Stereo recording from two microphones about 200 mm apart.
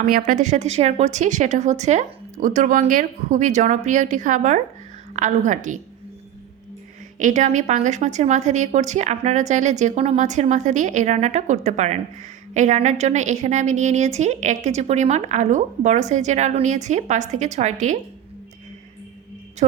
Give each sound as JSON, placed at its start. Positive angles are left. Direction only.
{"t": 0.0, "sound": "a woman's voice", "side_deg": -40}
{"t": 7.2, "sound": "a woman's voice", "side_deg": -40}